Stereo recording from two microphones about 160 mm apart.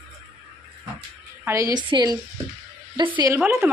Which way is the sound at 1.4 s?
20° right (ahead or behind).